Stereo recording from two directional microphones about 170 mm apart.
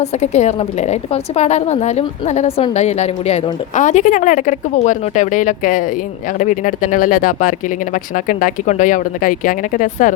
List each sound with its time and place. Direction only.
0.0 s a woman's voice: 40° left (ahead or behind)